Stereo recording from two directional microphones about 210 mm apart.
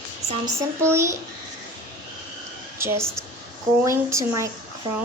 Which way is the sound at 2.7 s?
10° right (ahead or behind).